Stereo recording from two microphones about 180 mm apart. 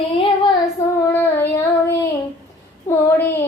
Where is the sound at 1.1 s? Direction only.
10° left (ahead or behind).